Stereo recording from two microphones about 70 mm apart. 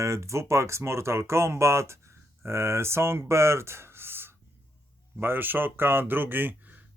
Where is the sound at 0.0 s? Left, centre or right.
Right.